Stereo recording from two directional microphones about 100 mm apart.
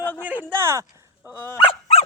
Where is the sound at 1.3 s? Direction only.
30° left (ahead or behind).